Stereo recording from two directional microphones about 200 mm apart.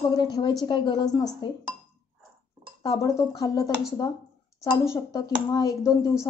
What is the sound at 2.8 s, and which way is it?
Speech, 15° left (ahead or behind).